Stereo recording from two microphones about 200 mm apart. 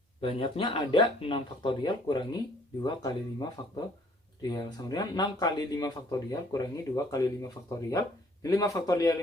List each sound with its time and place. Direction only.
0.2 s speech: 25° left (ahead or behind)